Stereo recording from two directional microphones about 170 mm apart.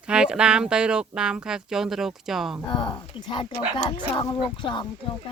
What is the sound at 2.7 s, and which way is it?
Speech, 25° left (ahead or behind).